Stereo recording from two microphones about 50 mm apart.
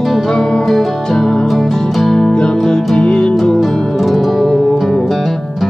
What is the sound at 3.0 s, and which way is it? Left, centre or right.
Music, centre.